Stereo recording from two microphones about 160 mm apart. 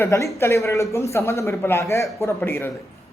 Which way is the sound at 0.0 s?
20° left (ahead or behind).